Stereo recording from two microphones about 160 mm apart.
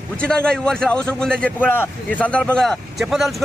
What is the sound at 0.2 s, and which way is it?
A man's voice, 5° left (ahead or behind).